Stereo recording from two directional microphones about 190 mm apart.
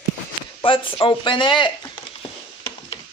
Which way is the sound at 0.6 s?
25° left (ahead or behind).